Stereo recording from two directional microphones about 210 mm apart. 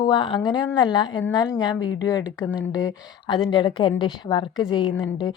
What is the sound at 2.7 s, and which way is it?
Speech, 20° left (ahead or behind).